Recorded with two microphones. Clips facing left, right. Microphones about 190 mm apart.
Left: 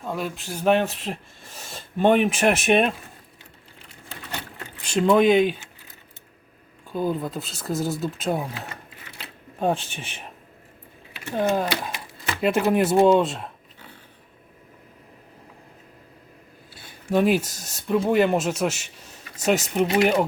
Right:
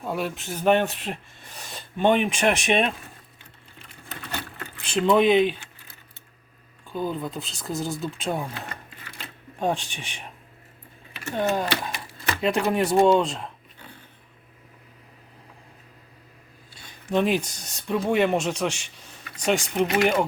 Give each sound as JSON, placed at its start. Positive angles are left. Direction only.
{"t": 0.0, "sound": "speech", "side_deg": -5}
{"t": 4.1, "sound": "a sound", "side_deg": 20}
{"t": 4.9, "sound": "speech", "side_deg": 0}
{"t": 6.9, "sound": "speech", "side_deg": 5}
{"t": 11.3, "sound": "speech", "side_deg": 5}
{"t": 16.7, "sound": "speech", "side_deg": 5}